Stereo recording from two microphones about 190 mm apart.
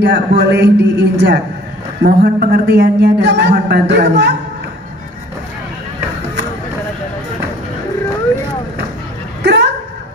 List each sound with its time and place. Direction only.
0.0 s speech: 65° right (ahead or behind)
2.0 s a man's voice: 50° right (ahead or behind)
9.4 s dog: 60° right (ahead or behind)